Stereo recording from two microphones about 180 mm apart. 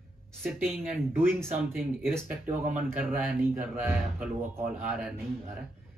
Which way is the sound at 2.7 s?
10° right (ahead or behind).